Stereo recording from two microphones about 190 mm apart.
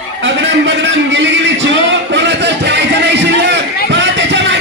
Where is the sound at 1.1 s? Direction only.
70° right (ahead or behind).